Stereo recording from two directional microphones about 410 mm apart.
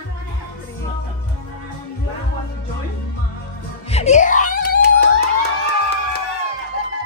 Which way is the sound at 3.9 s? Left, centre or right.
Centre.